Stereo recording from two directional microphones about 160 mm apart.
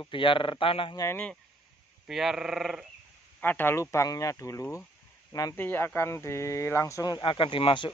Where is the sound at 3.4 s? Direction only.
10° left (ahead or behind).